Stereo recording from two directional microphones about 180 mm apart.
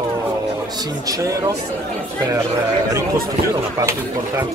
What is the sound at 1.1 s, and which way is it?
Speech, 20° right (ahead or behind).